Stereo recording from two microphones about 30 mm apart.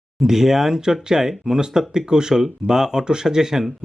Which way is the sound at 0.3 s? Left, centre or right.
Centre.